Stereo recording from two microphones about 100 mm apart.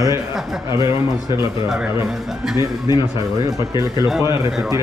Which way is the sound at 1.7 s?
5° right (ahead or behind).